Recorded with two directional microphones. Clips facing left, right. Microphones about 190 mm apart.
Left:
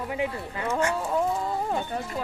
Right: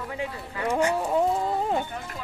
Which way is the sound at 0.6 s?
15° right (ahead or behind).